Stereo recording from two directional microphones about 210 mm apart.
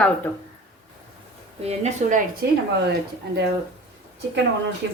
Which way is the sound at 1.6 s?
30° right (ahead or behind).